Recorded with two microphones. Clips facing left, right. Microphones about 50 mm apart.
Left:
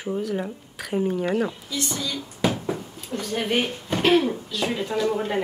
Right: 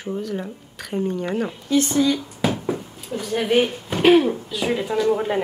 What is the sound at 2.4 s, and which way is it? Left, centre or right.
A woman's voice, centre.